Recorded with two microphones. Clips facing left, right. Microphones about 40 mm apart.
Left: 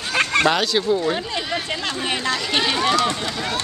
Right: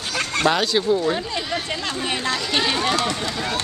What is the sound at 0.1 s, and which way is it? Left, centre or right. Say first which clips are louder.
Fowl: left 4 dB; left.